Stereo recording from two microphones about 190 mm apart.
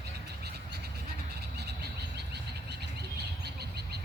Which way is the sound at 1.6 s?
60° right (ahead or behind).